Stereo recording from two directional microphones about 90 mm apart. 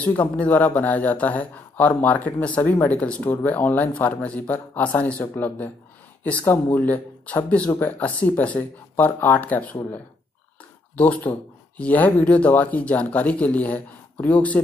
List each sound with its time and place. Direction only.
0.0 s speech: 15° left (ahead or behind)
11.0 s speech: 15° left (ahead or behind)